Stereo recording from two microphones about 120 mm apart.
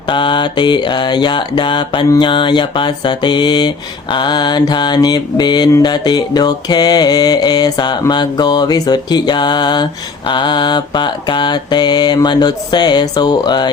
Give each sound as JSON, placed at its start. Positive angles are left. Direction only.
{"t": 0.1, "sound": "mantra", "side_deg": 40}